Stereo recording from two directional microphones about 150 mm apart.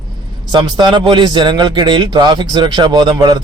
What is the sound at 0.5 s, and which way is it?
A man's voice, 30° right (ahead or behind).